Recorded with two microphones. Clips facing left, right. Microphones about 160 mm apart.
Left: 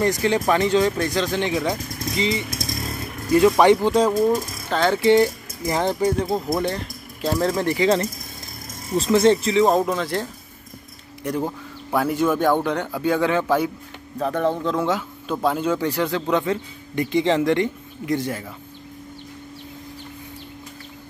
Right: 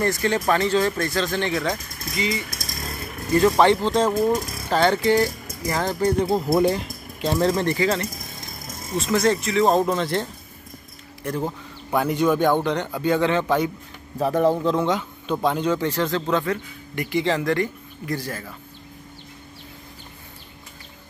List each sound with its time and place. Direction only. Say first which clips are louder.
0.0 s speech: left 2 dB; 15° left (ahead or behind)
2.0 s speech: left 3 dB; 25° left (ahead or behind)
3.3 s speech: left 2 dB; 10° left (ahead or behind)
4.2 s speech: left 2 dB; 5° right (ahead or behind)
5.0 s speech: left 4 dB; 20° left (ahead or behind)
6.0 s a man's voice: right 1 dB; centre (ahead or behind); by 7.9 s 15° left (ahead or behind)
8.9 s speech: left 4 dB; 30° left (ahead or behind)
9.7 s a man's voice: even; 5° left (ahead or behind)
11.2 s speech: left 2 dB; 15° left (ahead or behind)
11.9 s speech: even; centre (ahead or behind)
14.1 s a man's voice: right 2 dB; 10° right (ahead or behind); by 18.5 s 20° left (ahead or behind)